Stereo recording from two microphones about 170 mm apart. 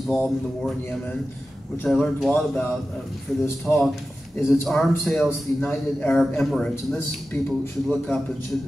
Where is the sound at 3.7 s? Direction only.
Centre (ahead or behind).